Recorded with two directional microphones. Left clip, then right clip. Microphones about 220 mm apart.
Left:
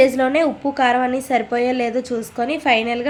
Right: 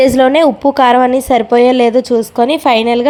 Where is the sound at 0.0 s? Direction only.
35° right (ahead or behind).